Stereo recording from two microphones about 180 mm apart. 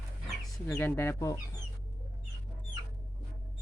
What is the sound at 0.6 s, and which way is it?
Speech, 10° left (ahead or behind).